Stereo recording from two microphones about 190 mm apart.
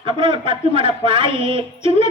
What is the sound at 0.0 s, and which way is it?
A man's voice, 25° right (ahead or behind).